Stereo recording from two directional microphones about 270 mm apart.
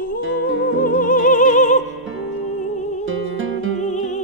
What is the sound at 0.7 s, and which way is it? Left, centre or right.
Music, left.